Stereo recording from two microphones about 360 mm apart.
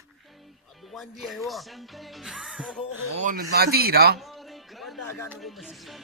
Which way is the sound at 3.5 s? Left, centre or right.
Right.